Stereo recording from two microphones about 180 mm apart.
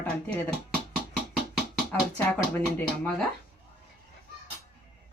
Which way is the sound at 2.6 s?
5° left (ahead or behind).